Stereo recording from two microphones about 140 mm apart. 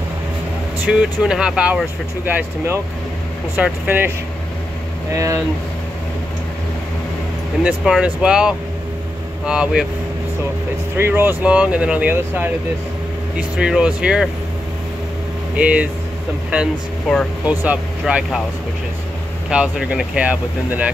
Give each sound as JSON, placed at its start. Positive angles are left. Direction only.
{"t": 0.9, "sound": "speech", "side_deg": -5}
{"t": 5.1, "sound": "speech", "side_deg": -20}
{"t": 7.6, "sound": "speech", "side_deg": -5}
{"t": 11.0, "sound": "speech", "side_deg": -15}
{"t": 15.5, "sound": "speech", "side_deg": -10}
{"t": 17.1, "sound": "speech", "side_deg": -5}
{"t": 19.5, "sound": "speech", "side_deg": -10}